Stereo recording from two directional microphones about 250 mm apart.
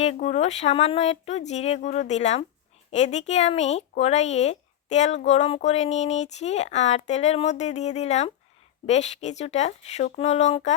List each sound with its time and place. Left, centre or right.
0.0 s speech: left